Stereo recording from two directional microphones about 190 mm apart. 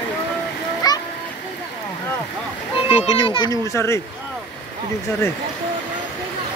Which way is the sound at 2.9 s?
30° left (ahead or behind).